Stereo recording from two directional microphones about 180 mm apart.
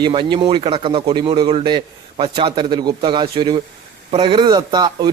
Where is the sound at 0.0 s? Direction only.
25° right (ahead or behind).